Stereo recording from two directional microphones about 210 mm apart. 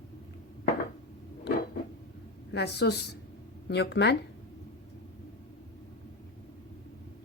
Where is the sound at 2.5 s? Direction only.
55° left (ahead or behind).